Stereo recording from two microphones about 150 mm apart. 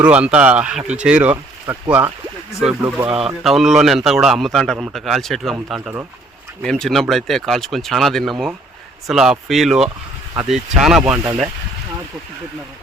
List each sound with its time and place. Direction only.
0.0 s a man's voice: 10° right (ahead or behind)
3.1 s speech: 40° right (ahead or behind)
3.4 s a man's voice: centre (ahead or behind)